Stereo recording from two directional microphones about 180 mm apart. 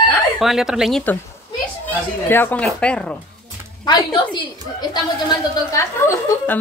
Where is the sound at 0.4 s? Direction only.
Centre (ahead or behind).